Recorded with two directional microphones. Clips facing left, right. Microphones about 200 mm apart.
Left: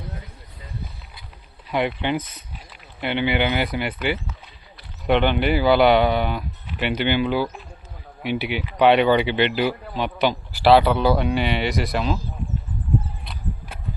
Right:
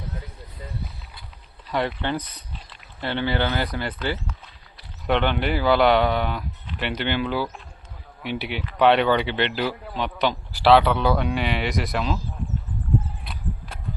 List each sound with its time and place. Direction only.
2.0 s speech: 15° left (ahead or behind)
3.8 s speech: 10° left (ahead or behind)